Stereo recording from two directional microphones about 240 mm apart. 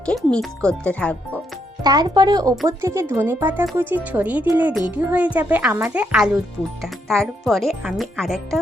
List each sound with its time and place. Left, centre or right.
0.0 s speech: centre
1.8 s speech: centre